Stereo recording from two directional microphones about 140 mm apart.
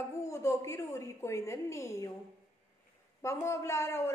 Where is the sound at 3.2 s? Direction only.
20° left (ahead or behind).